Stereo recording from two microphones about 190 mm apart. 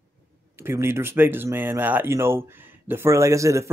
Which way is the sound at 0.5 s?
15° right (ahead or behind).